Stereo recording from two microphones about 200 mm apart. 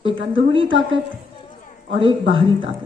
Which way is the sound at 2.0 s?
25° right (ahead or behind).